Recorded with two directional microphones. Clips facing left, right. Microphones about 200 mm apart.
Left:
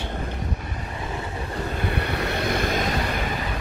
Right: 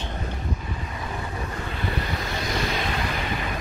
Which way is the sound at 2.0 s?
65° left (ahead or behind).